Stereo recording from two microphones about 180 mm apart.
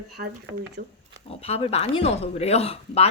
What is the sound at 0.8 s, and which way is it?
Speech, 60° right (ahead or behind).